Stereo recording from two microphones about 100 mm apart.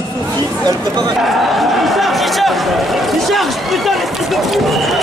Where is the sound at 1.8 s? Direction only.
Centre (ahead or behind).